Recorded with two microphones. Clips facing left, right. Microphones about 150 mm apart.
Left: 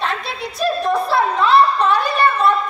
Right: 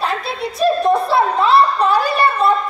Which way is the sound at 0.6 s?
30° right (ahead or behind).